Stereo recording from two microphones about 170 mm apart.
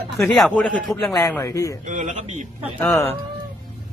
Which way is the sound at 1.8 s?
45° right (ahead or behind).